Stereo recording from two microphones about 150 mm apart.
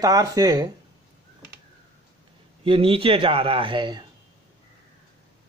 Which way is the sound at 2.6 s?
35° right (ahead or behind).